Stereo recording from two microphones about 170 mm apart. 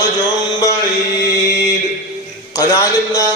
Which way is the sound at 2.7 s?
20° left (ahead or behind).